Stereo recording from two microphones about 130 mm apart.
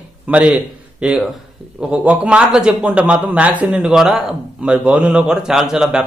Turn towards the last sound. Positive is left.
turn(degrees=-5)  # may be behind; listen again after turning